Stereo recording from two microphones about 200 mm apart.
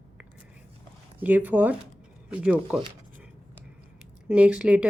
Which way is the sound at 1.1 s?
10° right (ahead or behind).